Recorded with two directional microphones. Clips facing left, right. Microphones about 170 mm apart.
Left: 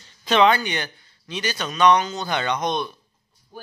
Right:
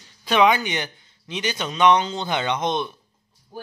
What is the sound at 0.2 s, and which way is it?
A man's voice, 10° right (ahead or behind).